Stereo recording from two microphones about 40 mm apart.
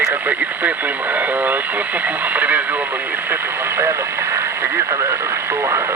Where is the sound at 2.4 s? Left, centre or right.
Right.